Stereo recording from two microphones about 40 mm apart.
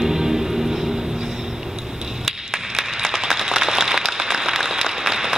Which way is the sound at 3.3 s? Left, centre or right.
Centre.